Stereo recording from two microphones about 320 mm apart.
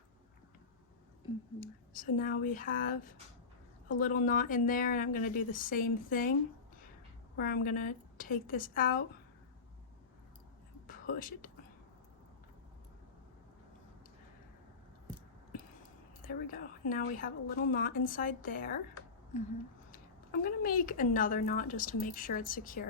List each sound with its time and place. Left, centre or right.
1.6 s a woman's voice: left
7.3 s a woman's voice: left
10.8 s speech: left
16.2 s a woman's voice: left
20.4 s a woman's voice: left